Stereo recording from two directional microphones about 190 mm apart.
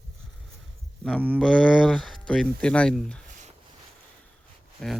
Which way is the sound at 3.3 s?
40° right (ahead or behind).